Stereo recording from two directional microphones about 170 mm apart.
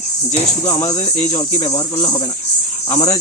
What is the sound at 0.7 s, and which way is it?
Speech, 20° left (ahead or behind).